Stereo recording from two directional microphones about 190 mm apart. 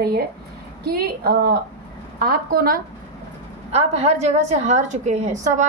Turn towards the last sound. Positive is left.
turn(degrees=-40)  # may be behind; listen again after turning